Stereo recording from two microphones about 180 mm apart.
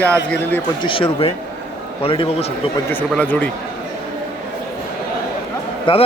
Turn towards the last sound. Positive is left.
turn(degrees=30)  # may be behind; listen again after turning